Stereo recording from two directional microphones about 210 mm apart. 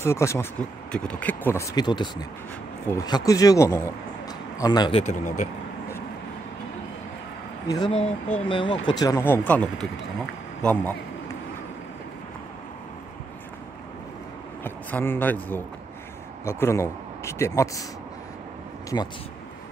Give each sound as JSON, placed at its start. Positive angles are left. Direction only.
{"t": 0.0, "sound": "speech", "side_deg": 15}
{"t": 5.0, "sound": "speech", "side_deg": 35}
{"t": 7.6, "sound": "speech", "side_deg": 20}
{"t": 14.6, "sound": "speech", "side_deg": 10}
{"t": 18.9, "sound": "speech", "side_deg": 15}